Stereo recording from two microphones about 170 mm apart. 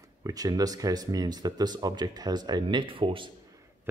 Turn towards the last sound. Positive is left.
turn(degrees=-30)  # may be behind; listen again after turning